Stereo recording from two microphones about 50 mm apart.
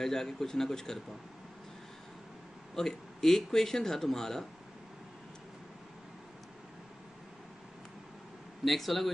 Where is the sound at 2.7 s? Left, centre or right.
Centre.